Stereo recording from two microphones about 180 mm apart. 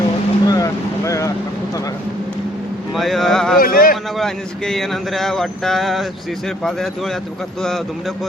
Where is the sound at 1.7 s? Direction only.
20° left (ahead or behind).